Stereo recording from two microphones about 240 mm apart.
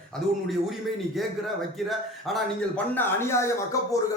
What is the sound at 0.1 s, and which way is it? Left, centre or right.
A man's voice, centre.